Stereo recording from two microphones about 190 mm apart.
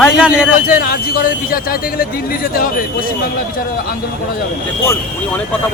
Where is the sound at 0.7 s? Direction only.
50° left (ahead or behind).